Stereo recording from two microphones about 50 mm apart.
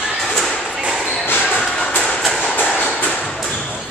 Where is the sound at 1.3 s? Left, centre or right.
Left.